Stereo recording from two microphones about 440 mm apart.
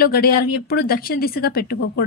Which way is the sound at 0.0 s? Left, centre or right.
Left.